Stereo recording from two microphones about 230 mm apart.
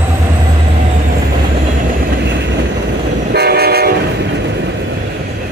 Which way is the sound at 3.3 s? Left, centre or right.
Right.